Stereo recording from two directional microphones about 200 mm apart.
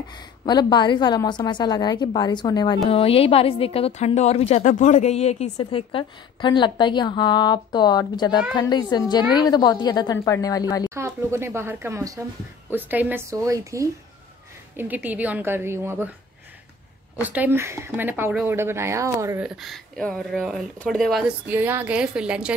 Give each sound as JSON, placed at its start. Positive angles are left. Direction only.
{"t": 0.5, "sound": "a woman's voice", "side_deg": 20}
{"t": 11.0, "sound": "speech", "side_deg": -15}
{"t": 17.2, "sound": "speech", "side_deg": -10}
{"t": 19.4, "sound": "speech", "side_deg": 0}